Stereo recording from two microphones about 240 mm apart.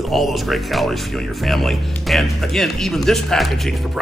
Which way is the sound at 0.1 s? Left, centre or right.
Centre.